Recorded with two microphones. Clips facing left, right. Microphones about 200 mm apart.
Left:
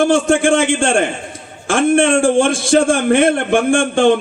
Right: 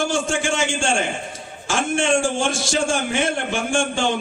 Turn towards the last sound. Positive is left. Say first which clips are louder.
# left 9 dB
turn(degrees=55)  # may be behind; listen again after turning